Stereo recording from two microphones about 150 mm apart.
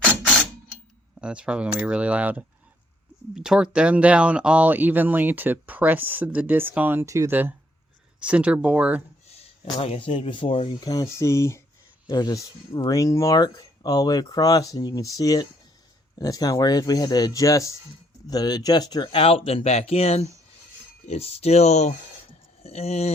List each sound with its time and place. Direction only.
1.2 s speech: 5° right (ahead or behind)
9.7 s speech: 40° left (ahead or behind)
19.2 s speech: 40° left (ahead or behind)